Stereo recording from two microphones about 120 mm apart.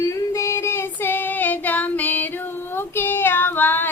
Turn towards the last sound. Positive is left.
turn(degrees=15)  # may be behind; listen again after turning